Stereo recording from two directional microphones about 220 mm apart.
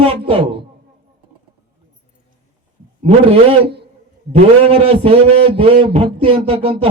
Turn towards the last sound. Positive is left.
turn(degrees=-25)  # may be behind; listen again after turning